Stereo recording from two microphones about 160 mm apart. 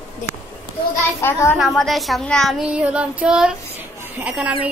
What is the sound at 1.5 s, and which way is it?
Child singing, centre (ahead or behind).